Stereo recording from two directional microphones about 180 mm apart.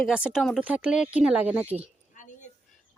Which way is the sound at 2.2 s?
45° left (ahead or behind).